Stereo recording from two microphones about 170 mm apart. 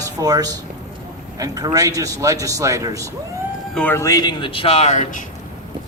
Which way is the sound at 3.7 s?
10° left (ahead or behind).